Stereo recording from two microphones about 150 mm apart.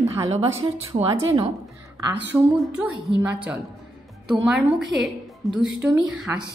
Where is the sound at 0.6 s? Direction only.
25° right (ahead or behind).